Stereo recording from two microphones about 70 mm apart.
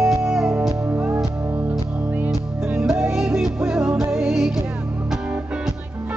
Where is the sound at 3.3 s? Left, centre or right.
Centre.